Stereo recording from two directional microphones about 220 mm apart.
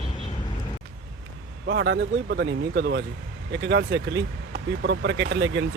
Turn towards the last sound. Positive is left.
turn(degrees=-55)  # may be behind; listen again after turning